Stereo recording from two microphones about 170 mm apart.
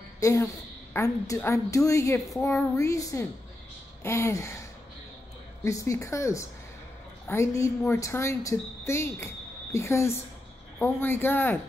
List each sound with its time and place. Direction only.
0.2 s a woman's voice: 15° left (ahead or behind)